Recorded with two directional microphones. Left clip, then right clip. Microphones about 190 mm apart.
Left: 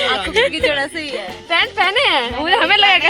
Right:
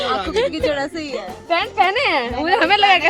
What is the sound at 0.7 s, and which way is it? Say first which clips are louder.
Speech: left 3 dB; 15° right (ahead or behind).